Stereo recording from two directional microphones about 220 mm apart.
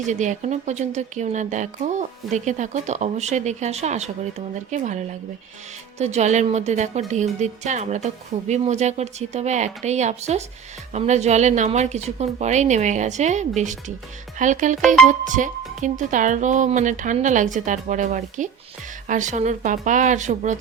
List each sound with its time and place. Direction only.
0.1 s a woman's voice: 35° right (ahead or behind)